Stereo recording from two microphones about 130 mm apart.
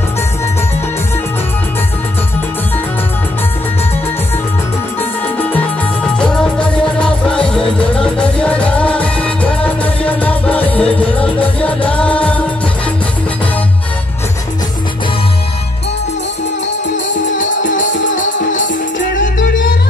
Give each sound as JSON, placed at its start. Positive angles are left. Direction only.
{"t": 6.1, "sound": "music", "side_deg": 5}
{"t": 17.4, "sound": "music", "side_deg": 80}